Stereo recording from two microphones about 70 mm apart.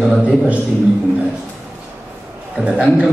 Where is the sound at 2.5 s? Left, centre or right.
Centre.